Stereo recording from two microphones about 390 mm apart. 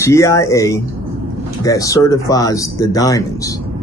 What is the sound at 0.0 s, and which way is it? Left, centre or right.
Speech, centre.